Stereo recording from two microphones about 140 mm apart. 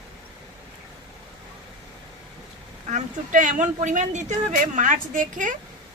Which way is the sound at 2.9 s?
65° right (ahead or behind).